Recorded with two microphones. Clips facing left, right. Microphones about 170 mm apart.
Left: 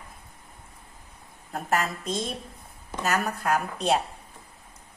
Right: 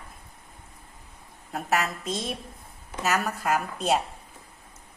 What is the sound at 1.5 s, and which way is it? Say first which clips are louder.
A woman's voice: even; centre (ahead or behind).